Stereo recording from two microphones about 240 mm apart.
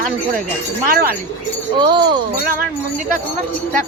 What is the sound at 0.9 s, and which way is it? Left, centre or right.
Speech, right.